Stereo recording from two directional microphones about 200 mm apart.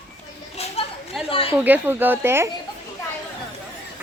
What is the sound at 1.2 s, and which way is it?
Speech, 25° left (ahead or behind).